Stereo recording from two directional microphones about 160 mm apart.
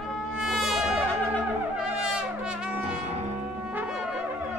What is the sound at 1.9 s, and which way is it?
Brass instrument, 5° right (ahead or behind).